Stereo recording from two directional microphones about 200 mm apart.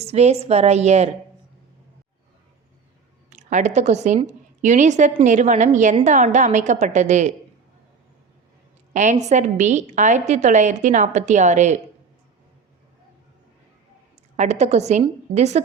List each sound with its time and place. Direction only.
0.0 s a woman's voice: 30° right (ahead or behind)
3.2 s a woman's voice: 35° right (ahead or behind)
8.9 s a woman's voice: 35° right (ahead or behind)
14.3 s a woman's voice: 35° right (ahead or behind)